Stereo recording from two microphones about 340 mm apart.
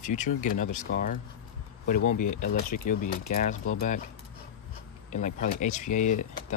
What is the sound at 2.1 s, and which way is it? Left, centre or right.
Speech, left.